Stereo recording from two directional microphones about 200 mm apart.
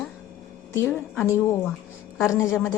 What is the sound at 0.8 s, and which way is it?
Speech, 10° left (ahead or behind).